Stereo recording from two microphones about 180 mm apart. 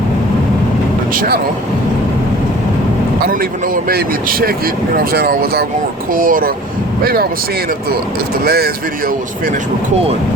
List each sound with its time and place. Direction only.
1.1 s speech: 55° right (ahead or behind)
3.8 s speech: 55° right (ahead or behind)
8.4 s speech: 60° right (ahead or behind)